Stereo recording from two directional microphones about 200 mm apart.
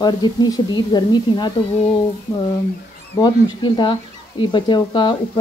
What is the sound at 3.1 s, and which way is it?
Speech, 20° left (ahead or behind).